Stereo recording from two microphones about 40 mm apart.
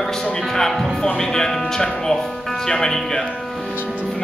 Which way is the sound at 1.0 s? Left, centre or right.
Centre.